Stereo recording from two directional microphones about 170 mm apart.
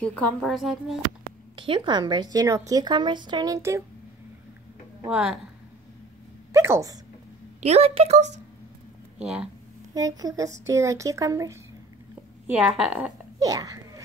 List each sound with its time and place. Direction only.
0.0 s a woman's voice: 5° left (ahead or behind)
1.6 s a woman's voice: 25° right (ahead or behind)
5.1 s a woman's voice: 5° right (ahead or behind)
6.5 s a sound: 15° right (ahead or behind)
7.6 s a woman's voice: 35° right (ahead or behind)
9.2 s a woman's voice: 5° right (ahead or behind)
9.9 s a woman's voice: 20° right (ahead or behind)
12.4 s a woman's voice: 5° right (ahead or behind)
13.4 s a sound: 20° right (ahead or behind)